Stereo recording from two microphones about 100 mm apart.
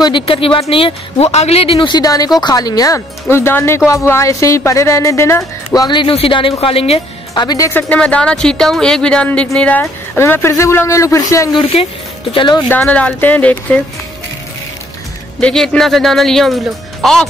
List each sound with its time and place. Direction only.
0.0 s speech: 60° left (ahead or behind); by 1.9 s 75° left (ahead or behind)
1.9 s speech: 40° left (ahead or behind)
3.3 s speech: 25° left (ahead or behind)
5.7 s speech: 45° left (ahead or behind)
6.0 s speech: 65° left (ahead or behind)
7.3 s speech: 40° left (ahead or behind)
7.7 s speech: 15° left (ahead or behind)
10.1 s speech: 25° left (ahead or behind)
11.7 s speech: 70° left (ahead or behind)
12.6 s speech: 15° left (ahead or behind)
15.4 s speech: 5° left (ahead or behind)